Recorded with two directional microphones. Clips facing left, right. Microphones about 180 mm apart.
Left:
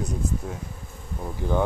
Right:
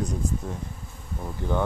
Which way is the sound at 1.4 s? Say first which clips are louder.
Left 2 dB; 15° left (ahead or behind).